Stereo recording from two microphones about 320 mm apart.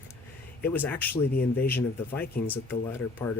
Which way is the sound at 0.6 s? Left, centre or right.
Centre.